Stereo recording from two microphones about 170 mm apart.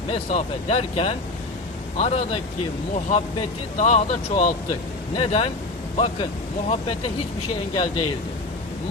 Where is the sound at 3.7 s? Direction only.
45° left (ahead or behind).